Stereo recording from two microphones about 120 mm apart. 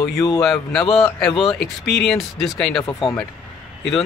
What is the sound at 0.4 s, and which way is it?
Speech, 5° left (ahead or behind).